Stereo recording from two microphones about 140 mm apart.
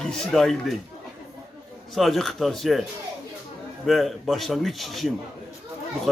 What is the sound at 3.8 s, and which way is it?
A man's voice, centre (ahead or behind).